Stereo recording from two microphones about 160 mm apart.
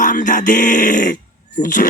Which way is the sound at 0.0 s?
55° left (ahead or behind).